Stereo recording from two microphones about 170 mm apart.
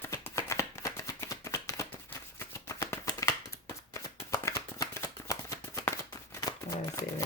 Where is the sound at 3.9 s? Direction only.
20° left (ahead or behind).